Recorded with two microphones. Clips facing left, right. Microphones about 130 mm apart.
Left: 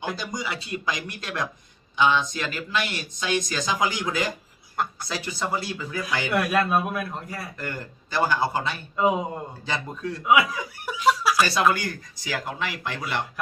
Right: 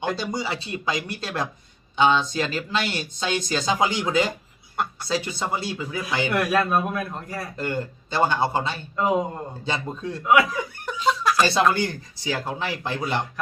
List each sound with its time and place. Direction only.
0.2 s speech: 30° right (ahead or behind)
6.3 s a man's voice: centre (ahead or behind)
7.5 s speech: 25° right (ahead or behind)
9.0 s a man's voice: 5° left (ahead or behind)
9.6 s speech: 25° right (ahead or behind)
10.2 s speech: 5° left (ahead or behind)
11.7 s speech: 30° right (ahead or behind)